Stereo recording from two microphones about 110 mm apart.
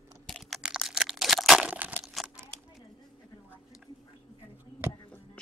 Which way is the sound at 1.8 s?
15° right (ahead or behind).